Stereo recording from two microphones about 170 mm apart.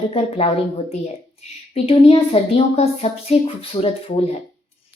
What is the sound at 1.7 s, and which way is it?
A child's voice, 35° left (ahead or behind).